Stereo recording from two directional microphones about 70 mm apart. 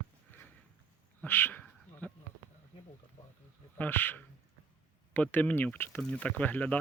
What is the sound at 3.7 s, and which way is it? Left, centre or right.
Speech, left.